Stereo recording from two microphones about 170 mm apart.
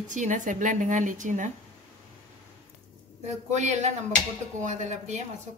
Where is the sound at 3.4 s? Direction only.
45° right (ahead or behind).